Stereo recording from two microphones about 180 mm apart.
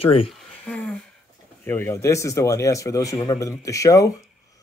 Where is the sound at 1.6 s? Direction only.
15° left (ahead or behind).